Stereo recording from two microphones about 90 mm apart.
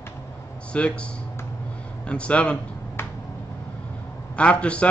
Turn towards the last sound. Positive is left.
turn(degrees=15)  # may be behind; listen again after turning